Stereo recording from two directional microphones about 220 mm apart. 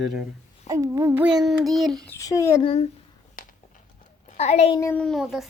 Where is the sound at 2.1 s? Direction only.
15° left (ahead or behind).